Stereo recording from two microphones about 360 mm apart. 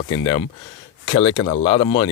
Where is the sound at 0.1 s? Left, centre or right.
Centre.